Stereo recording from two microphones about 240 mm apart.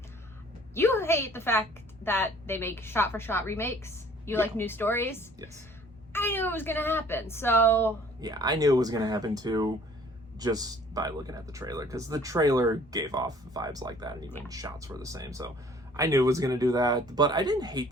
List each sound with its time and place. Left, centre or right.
0.7 s a woman's voice: centre
8.2 s speech: centre